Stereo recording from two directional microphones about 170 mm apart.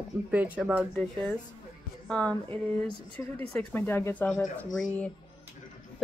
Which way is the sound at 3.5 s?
10° left (ahead or behind).